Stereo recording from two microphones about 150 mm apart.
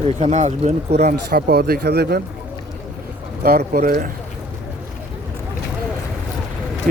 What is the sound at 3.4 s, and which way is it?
Speech, 90° right.